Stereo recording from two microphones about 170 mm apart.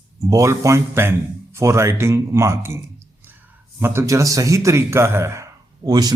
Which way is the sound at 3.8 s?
15° right (ahead or behind).